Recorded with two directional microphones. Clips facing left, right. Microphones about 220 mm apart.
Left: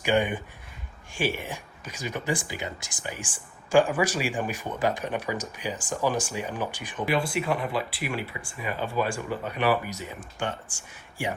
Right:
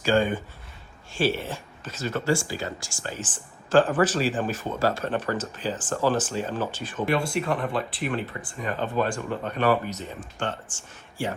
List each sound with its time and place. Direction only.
0.0 s speech: 15° left (ahead or behind)